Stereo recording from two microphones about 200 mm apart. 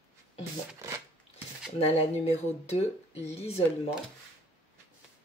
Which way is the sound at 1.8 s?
30° left (ahead or behind).